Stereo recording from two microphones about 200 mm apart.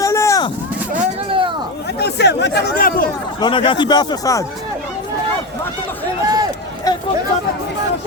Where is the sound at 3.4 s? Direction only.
25° left (ahead or behind).